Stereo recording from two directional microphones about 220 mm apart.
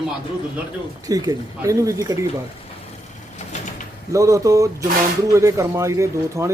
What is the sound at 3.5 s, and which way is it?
Bird, 35° left (ahead or behind).